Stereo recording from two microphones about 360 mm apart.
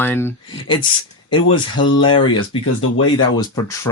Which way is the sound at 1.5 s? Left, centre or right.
Left.